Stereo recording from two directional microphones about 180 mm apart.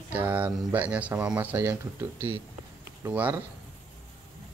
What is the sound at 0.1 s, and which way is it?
Speech, 10° right (ahead or behind).